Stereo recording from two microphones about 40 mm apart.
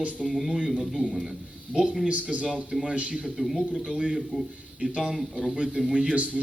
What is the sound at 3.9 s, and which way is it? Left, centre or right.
A man's voice, right.